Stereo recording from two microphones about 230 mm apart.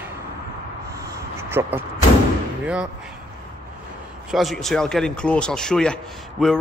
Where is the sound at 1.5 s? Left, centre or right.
Centre.